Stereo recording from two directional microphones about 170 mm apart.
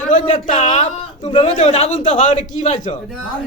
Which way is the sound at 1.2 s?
30° left (ahead or behind).